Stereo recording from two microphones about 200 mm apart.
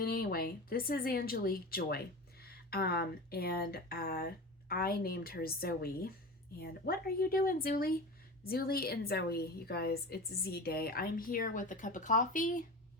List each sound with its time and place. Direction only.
0.0 s a woman's voice: 50° left (ahead or behind)